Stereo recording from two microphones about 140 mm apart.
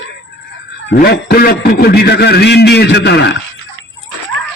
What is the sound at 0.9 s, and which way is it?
A man's voice, 90° left.